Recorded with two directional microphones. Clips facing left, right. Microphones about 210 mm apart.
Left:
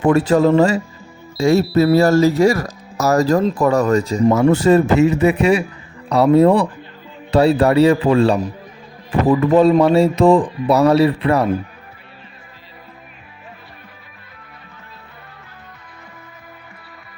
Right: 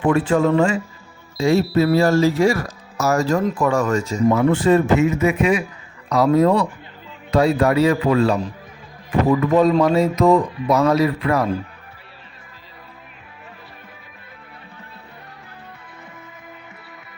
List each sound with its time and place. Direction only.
0.0 s speech: 40° left (ahead or behind)